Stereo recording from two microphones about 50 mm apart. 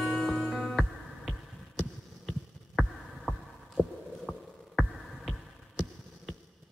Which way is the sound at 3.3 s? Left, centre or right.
Centre.